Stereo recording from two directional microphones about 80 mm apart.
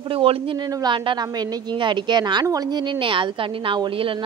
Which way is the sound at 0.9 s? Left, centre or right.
Right.